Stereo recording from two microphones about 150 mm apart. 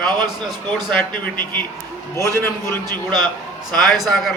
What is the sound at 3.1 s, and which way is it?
Speech, 30° right (ahead or behind).